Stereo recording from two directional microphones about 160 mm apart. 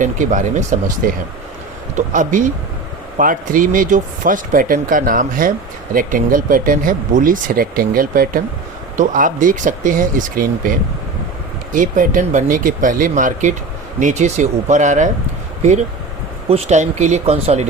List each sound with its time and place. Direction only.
0.0 s speech: 50° right (ahead or behind)
11.7 s speech: 55° right (ahead or behind)
16.5 s speech: 45° right (ahead or behind)